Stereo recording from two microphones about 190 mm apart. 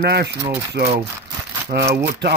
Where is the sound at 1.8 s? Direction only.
15° right (ahead or behind).